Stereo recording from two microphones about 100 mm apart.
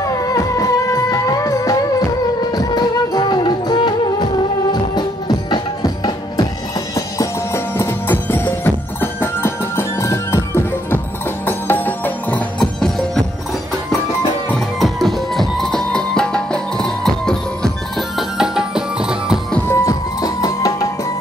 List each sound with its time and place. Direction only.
0.0 s music: 35° left (ahead or behind)
7.2 s music: 25° left (ahead or behind)
14.8 s music: centre (ahead or behind)
19.7 s music: 35° left (ahead or behind)